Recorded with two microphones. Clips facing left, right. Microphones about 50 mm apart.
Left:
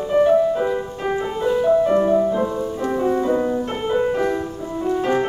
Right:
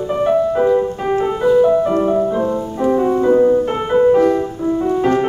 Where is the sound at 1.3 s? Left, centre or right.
Centre.